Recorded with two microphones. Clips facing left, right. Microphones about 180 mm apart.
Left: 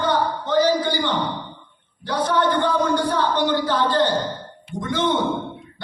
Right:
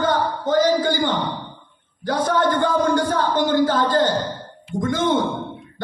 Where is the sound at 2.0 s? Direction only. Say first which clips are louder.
Right 1 dB; 45° right (ahead or behind).